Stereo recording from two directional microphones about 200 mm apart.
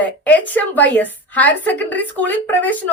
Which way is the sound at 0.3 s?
10° left (ahead or behind).